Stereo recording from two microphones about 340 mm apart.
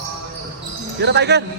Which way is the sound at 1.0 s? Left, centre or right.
Right.